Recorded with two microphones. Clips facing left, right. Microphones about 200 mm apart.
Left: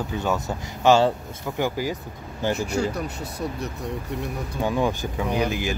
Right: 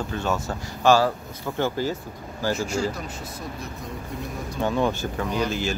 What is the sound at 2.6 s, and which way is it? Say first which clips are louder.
Speech: left 1 dB; 65° left (ahead or behind).